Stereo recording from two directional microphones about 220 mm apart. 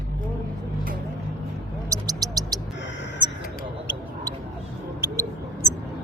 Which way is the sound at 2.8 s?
55° left (ahead or behind).